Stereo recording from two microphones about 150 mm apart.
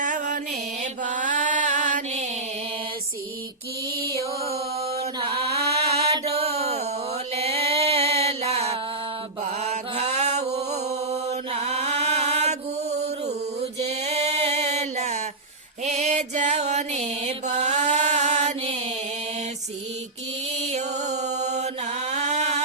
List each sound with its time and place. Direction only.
0.0 s mantra: 60° right (ahead or behind)
5.3 s mantra: 90° right
6.3 s a sound: 45° right (ahead or behind)
7.3 s music: 40° right (ahead or behind)
9.4 s mantra: 45° right (ahead or behind)
13.8 s music: 45° right (ahead or behind)
15.8 s mantra: 50° right (ahead or behind)
20.7 s mantra: 50° right (ahead or behind)
22.1 s a sound: 50° right (ahead or behind)